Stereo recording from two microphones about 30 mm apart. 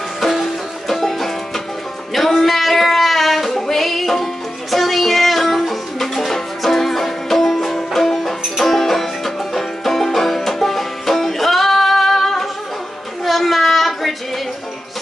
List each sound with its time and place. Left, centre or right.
0.2 s music: centre
2.1 s child singing: centre
3.4 s music: centre
13.2 s a sound: centre